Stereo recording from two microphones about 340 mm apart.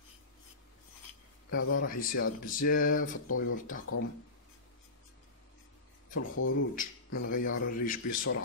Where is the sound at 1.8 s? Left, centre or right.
Left.